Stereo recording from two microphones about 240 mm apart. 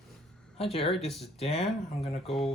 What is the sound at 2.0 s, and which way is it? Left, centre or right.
Speech, left.